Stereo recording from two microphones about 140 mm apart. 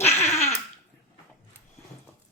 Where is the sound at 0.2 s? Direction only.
50° left (ahead or behind).